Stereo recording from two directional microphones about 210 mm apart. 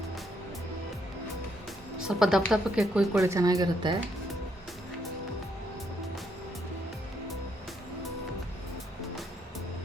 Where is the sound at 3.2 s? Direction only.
15° right (ahead or behind).